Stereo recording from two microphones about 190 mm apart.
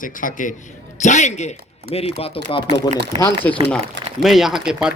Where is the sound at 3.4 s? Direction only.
10° left (ahead or behind).